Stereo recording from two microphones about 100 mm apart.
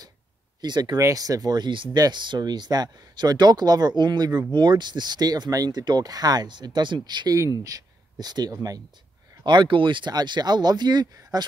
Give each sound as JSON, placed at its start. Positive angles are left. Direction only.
{"t": 0.6, "sound": "speech", "side_deg": -45}
{"t": 0.9, "sound": "speech", "side_deg": -35}
{"t": 9.4, "sound": "speech", "side_deg": -50}